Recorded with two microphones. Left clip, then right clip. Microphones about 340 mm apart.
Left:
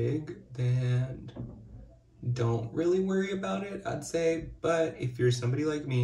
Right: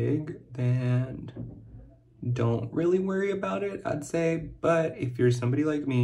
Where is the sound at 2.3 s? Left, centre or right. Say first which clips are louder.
Right 3 dB; right.